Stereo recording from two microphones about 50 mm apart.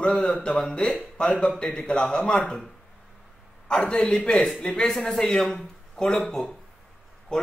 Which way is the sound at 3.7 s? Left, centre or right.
Centre.